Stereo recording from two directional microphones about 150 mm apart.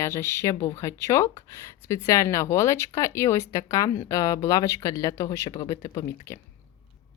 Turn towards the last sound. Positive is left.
turn(degrees=20)  # may be behind; listen again after turning